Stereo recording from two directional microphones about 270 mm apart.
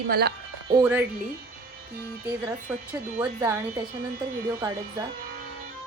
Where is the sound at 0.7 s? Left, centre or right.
Centre.